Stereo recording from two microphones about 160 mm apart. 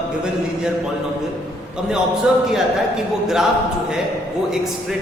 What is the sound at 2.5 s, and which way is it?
Speech, centre (ahead or behind).